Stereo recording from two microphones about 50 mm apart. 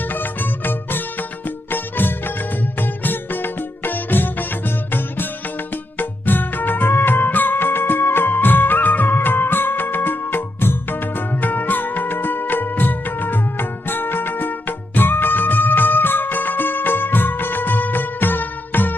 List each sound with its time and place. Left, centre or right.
0.0 s music: left